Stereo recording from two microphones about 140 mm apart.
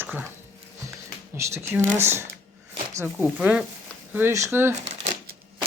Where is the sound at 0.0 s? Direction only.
10° right (ahead or behind).